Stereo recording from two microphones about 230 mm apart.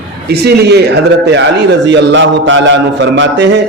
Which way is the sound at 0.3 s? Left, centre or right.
Right.